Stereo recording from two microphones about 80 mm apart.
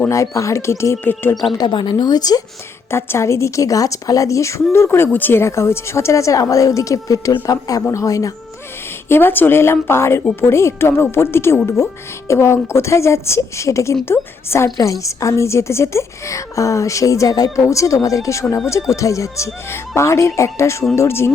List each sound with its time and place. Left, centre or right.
0.1 s a woman's voice: left
1.5 s a woman's voice: left
2.0 s speech: left
2.9 s a woman's voice: left
9.0 s a woman's voice: left